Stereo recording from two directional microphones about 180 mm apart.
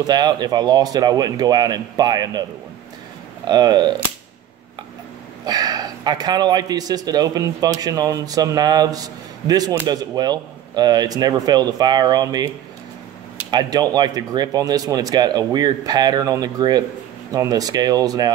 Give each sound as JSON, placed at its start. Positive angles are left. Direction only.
{"t": 0.0, "sound": "a man's voice", "side_deg": -25}
{"t": 3.4, "sound": "a man's voice", "side_deg": -25}
{"t": 5.4, "sound": "a man's voice", "side_deg": -20}
{"t": 13.5, "sound": "a man's voice", "side_deg": -25}